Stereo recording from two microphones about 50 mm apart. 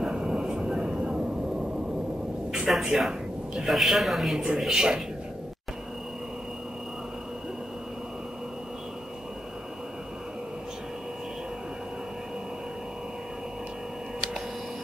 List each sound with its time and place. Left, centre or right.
0.0 s train: centre
2.5 s a man's voice: centre